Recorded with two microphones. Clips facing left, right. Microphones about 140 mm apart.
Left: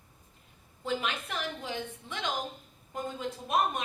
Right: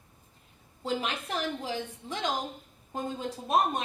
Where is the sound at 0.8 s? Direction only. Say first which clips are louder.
Right 1 dB; 35° right (ahead or behind).